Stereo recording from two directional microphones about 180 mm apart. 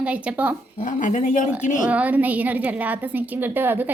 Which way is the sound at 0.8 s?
45° left (ahead or behind).